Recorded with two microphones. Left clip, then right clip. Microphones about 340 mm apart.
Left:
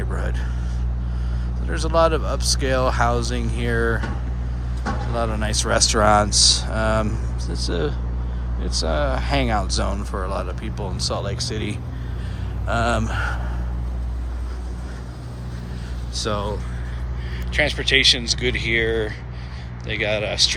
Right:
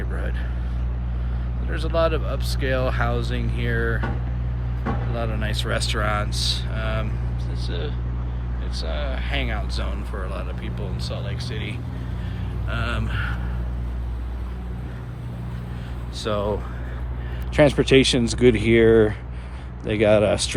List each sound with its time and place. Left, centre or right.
1.7 s speech: centre
5.1 s speech: centre
16.2 s speech: centre
17.5 s speech: centre
19.9 s speech: centre